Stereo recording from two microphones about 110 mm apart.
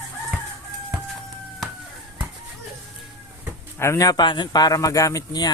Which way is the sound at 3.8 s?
25° left (ahead or behind).